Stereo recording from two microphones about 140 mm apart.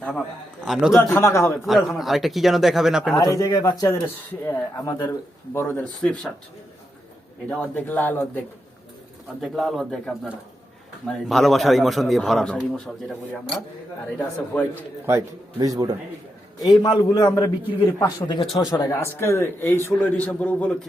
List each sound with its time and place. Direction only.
0.6 s a man's voice: 5° right (ahead or behind)
0.9 s a man's voice: 20° left (ahead or behind)
1.6 s a man's voice: centre (ahead or behind)
3.2 s a man's voice: 25° left (ahead or behind)
6.0 s a man's voice: 5° left (ahead or behind)
7.5 s a man's voice: 10° left (ahead or behind)
9.4 s a man's voice: centre (ahead or behind)
11.0 s a man's voice: centre (ahead or behind)
15.0 s a man's voice: 20° right (ahead or behind)
16.6 s a man's voice: 30° left (ahead or behind); by 20.7 s 10° left (ahead or behind)